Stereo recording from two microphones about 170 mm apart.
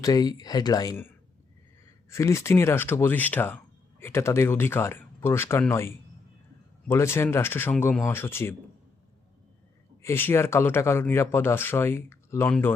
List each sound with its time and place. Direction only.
0.0 s speech: 20° left (ahead or behind)
2.0 s speech: 15° left (ahead or behind)
10.0 s speech: 15° left (ahead or behind)